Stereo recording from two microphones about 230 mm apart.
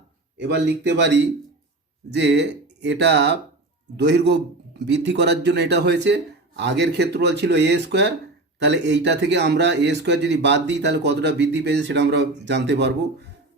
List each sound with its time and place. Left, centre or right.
0.3 s a man's voice: right